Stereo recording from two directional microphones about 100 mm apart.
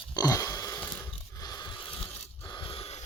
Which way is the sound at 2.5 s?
55° left (ahead or behind).